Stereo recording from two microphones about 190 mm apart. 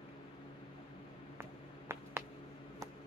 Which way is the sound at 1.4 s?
15° right (ahead or behind).